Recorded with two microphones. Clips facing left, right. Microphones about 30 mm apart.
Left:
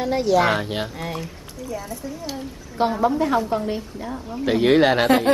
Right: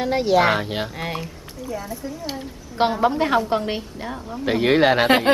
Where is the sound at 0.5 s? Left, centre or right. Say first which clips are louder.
Right 1 dB; centre.